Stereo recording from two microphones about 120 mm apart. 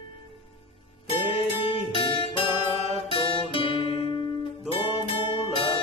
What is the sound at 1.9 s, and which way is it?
Music, 50° left (ahead or behind).